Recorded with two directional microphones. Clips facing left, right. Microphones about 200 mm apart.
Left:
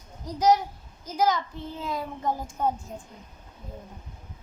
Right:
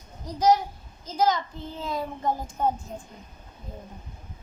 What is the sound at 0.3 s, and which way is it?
A woman's voice, 15° left (ahead or behind).